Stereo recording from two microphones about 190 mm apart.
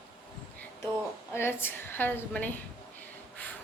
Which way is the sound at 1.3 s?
10° left (ahead or behind).